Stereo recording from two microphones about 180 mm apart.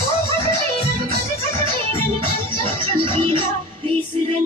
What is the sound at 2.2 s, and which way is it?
Music, 30° right (ahead or behind).